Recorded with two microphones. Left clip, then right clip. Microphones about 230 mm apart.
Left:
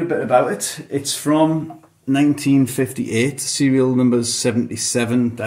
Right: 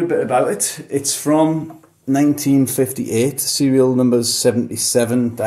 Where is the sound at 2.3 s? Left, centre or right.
Left.